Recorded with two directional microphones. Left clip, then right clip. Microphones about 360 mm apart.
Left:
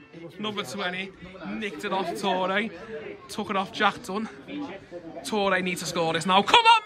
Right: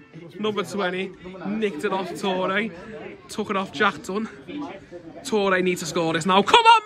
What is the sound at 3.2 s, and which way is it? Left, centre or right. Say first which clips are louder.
A man's voice: right 2 dB; centre.